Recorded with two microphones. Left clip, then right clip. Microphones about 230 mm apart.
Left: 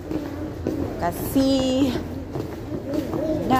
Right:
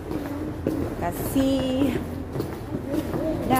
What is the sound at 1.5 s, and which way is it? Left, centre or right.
Speech, left.